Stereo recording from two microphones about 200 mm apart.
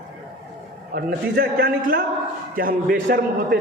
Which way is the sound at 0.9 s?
50° right (ahead or behind).